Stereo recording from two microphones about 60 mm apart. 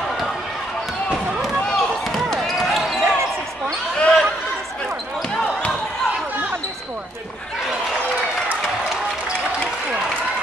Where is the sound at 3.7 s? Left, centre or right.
Centre.